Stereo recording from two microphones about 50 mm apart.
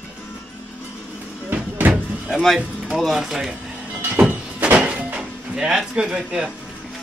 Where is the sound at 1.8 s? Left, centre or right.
Right.